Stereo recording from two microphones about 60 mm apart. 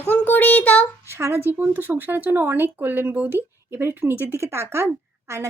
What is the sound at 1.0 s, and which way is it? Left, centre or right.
A woman's voice, right.